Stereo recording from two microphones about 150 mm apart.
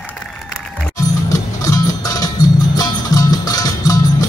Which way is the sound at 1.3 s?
25° left (ahead or behind).